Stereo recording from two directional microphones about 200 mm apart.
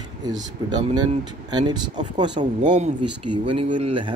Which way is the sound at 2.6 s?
35° right (ahead or behind).